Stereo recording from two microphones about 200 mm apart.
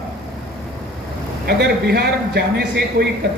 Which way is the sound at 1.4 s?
50° right (ahead or behind).